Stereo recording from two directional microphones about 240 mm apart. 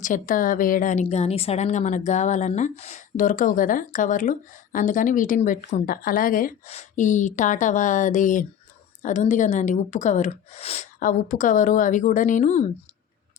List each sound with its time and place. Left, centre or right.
0.0 s a woman's voice: left